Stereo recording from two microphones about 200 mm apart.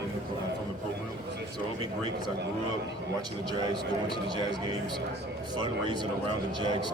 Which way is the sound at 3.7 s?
20° right (ahead or behind).